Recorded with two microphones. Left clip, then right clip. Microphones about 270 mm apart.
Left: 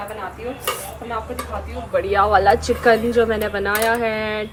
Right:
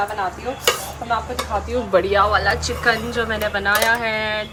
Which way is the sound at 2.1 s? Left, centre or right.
Centre.